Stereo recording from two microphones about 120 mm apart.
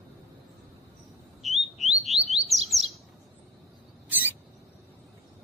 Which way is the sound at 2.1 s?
60° right (ahead or behind).